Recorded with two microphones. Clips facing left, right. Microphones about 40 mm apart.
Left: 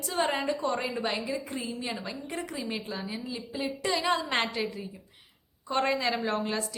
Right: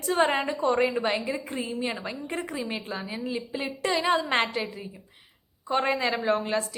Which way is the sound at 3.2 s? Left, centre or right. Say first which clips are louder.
Right 3 dB; right.